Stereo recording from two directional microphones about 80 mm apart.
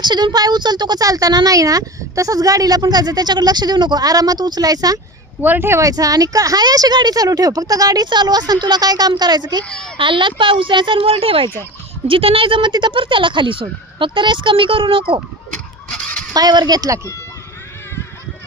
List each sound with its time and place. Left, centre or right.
0.0 s a woman's voice: right
5.4 s speech: right
5.8 s speech: right
8.0 s a woman's voice: right
9.6 s a child's voice: centre
10.0 s speech: right
12.0 s speech: right
15.9 s honk: centre
16.3 s a woman's voice: right